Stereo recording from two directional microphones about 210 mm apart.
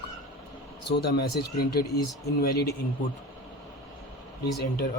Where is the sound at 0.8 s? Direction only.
50° left (ahead or behind).